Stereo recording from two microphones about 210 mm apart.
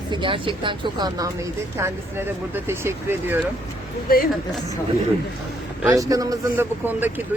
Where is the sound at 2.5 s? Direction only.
10° right (ahead or behind).